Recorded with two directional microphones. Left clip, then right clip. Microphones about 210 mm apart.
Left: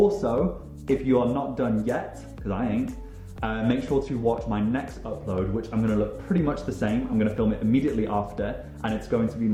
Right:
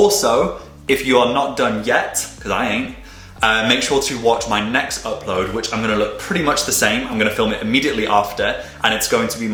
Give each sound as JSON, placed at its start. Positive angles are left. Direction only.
{"t": 0.0, "sound": "speech", "side_deg": -5}